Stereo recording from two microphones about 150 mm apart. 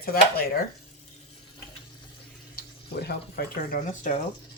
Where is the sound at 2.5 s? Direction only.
90° left; by 4.1 s 60° left (ahead or behind).